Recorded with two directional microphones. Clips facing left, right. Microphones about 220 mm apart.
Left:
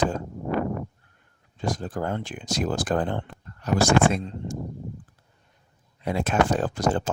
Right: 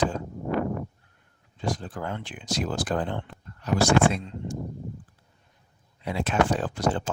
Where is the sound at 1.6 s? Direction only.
45° left (ahead or behind).